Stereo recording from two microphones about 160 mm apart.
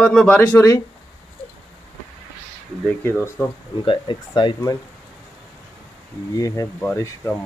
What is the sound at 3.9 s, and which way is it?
Speech, 30° left (ahead or behind).